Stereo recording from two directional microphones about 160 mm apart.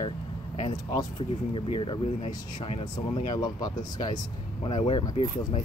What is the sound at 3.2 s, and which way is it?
Speech, 25° left (ahead or behind).